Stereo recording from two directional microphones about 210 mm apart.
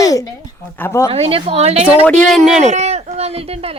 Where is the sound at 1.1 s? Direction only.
25° right (ahead or behind).